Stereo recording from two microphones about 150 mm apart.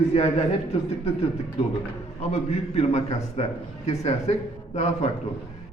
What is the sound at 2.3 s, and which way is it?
Speech, 45° left (ahead or behind).